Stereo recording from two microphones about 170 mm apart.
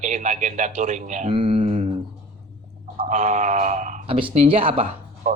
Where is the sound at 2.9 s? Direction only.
45° right (ahead or behind).